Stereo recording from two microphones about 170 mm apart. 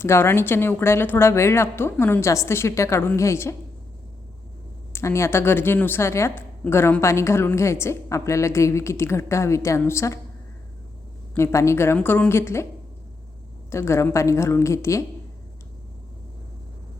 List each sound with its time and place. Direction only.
0.0 s a woman's voice: 15° left (ahead or behind)
4.9 s a woman's voice: 15° left (ahead or behind)
11.3 s a woman's voice: 15° left (ahead or behind)
13.7 s a woman's voice: 15° left (ahead or behind)